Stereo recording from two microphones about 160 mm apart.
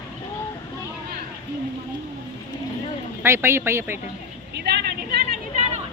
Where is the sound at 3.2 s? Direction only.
15° right (ahead or behind).